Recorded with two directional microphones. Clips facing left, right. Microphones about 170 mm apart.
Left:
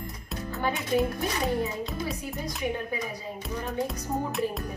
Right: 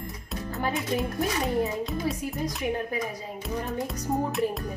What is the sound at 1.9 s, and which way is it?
Music, centre (ahead or behind).